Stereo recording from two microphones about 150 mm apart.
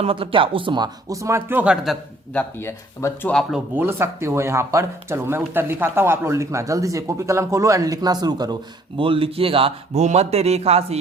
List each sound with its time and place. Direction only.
0.0 s speech: 35° right (ahead or behind); by 2.0 s 5° right (ahead or behind)
2.3 s speech: 15° left (ahead or behind)
3.8 s speech: 15° right (ahead or behind)
9.0 s a man's voice: 35° right (ahead or behind)